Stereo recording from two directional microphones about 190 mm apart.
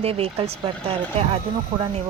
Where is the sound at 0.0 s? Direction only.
30° right (ahead or behind).